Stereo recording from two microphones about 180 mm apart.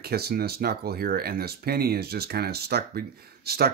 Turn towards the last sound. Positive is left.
turn(degrees=-60)  # may be behind; listen again after turning